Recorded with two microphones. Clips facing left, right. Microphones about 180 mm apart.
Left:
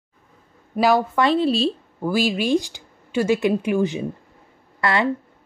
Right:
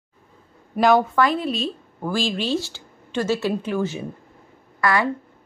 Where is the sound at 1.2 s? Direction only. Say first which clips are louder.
Left 3 dB; 30° left (ahead or behind).